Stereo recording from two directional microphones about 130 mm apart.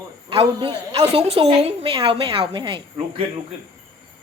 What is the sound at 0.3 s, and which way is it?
A woman's voice, 40° right (ahead or behind).